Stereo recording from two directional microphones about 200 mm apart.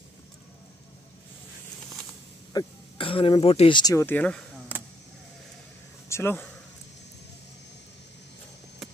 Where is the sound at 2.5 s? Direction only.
25° left (ahead or behind); by 4.4 s 10° left (ahead or behind).